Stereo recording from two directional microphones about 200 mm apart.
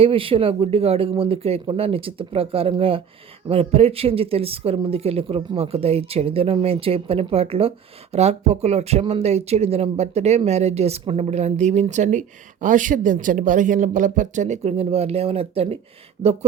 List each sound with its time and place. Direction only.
0.0 s speech: 25° right (ahead or behind)